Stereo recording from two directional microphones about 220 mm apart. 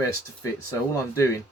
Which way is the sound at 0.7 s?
15° left (ahead or behind).